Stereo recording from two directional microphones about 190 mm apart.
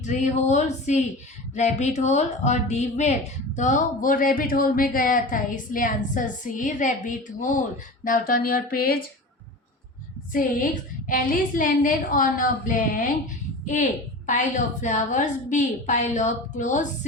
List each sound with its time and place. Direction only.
0.1 s a woman's voice: 40° left (ahead or behind)
10.3 s a woman's voice: 45° left (ahead or behind)